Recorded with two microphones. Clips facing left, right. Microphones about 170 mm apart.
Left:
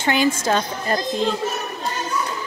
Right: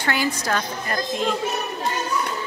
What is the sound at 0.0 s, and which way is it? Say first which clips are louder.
A woman's voice: left 5 dB; 20° left (ahead or behind).